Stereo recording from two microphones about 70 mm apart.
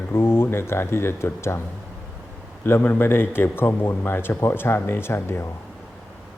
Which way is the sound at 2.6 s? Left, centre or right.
Left.